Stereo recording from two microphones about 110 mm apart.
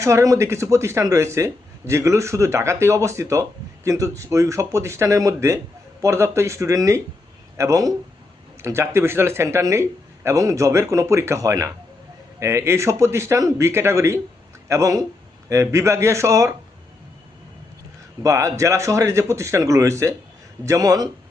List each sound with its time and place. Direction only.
0.0 s speech: 30° right (ahead or behind)
18.2 s speech: 30° right (ahead or behind)